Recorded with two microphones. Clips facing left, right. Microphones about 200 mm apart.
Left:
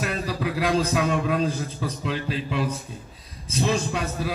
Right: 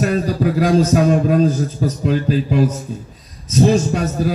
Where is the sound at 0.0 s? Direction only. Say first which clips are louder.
Right 10 dB; 40° right (ahead or behind).